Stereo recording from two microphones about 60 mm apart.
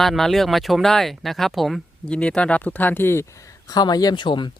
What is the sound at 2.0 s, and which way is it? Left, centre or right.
Speech, centre.